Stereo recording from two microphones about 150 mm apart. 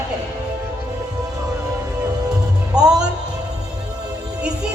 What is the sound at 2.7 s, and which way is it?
Speech, 25° right (ahead or behind).